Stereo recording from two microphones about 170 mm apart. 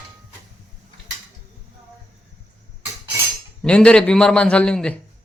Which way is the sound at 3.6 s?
5° left (ahead or behind).